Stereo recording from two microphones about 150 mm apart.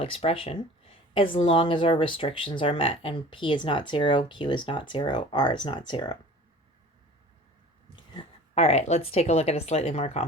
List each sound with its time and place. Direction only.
0.0 s speech: 40° left (ahead or behind)
8.5 s speech: 45° left (ahead or behind)